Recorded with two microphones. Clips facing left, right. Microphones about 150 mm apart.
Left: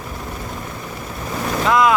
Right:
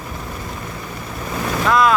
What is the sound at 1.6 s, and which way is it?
Speech, 20° left (ahead or behind).